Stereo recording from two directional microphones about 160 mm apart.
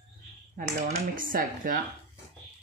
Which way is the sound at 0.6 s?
60° right (ahead or behind).